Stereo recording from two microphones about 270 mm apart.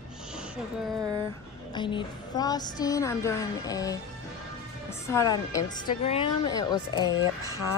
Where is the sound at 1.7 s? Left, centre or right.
Centre.